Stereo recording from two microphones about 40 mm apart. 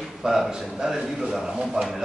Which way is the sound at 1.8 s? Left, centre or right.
Centre.